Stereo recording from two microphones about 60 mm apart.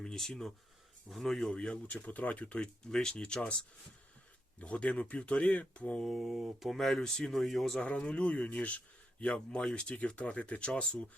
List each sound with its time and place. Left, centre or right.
0.0 s speech: centre
1.5 s speech: centre
4.6 s speech: left
6.0 s speech: centre
7.8 s speech: left
9.5 s speech: centre